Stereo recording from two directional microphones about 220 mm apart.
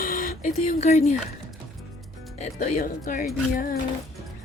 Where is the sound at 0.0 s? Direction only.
35° left (ahead or behind).